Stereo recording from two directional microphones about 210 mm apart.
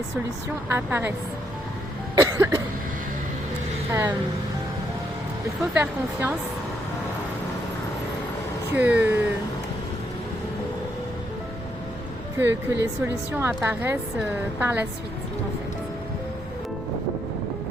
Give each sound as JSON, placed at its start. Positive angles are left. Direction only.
{"t": 0.7, "sound": "a woman's voice", "side_deg": -10}
{"t": 2.1, "sound": "cough", "side_deg": -15}
{"t": 5.7, "sound": "a woman's voice", "side_deg": -10}
{"t": 8.7, "sound": "a woman's voice", "side_deg": -10}
{"t": 12.4, "sound": "a woman's voice", "side_deg": -10}